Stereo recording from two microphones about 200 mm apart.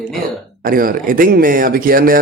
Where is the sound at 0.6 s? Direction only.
45° right (ahead or behind).